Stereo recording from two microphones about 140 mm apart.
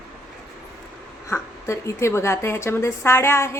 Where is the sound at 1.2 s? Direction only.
20° left (ahead or behind).